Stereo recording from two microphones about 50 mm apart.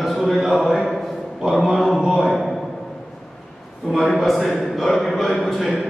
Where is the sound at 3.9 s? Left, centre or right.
Centre.